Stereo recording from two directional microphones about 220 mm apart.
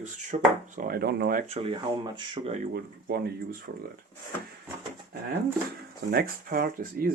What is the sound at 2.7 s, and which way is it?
Speech, 45° right (ahead or behind).